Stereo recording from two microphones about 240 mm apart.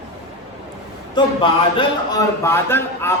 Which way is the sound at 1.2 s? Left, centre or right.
Centre.